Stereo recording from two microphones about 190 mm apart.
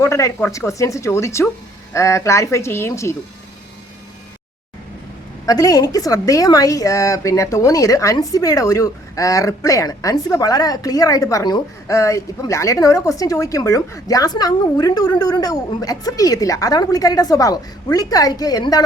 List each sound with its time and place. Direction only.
0.0 s a woman's voice: 15° left (ahead or behind)
5.5 s a woman's voice: 20° left (ahead or behind)